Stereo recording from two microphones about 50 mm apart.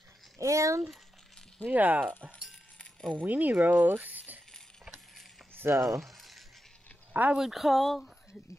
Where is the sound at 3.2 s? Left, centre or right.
Right.